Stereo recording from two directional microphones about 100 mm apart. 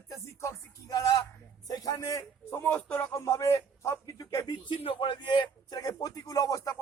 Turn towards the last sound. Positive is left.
turn(degrees=35)  # may be behind; listen again after turning